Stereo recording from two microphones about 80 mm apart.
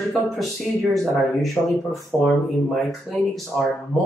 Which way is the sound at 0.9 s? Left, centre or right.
Centre.